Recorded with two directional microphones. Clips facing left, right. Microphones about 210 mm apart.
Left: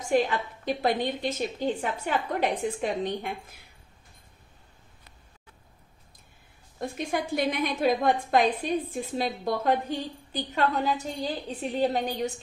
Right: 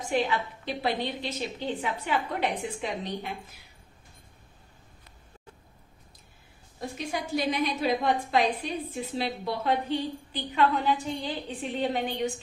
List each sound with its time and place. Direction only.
0.1 s a woman's voice: 45° left (ahead or behind)
7.0 s a woman's voice: 55° left (ahead or behind); by 12.3 s 40° left (ahead or behind)